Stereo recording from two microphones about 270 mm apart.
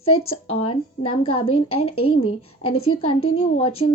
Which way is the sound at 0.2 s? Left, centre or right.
Left.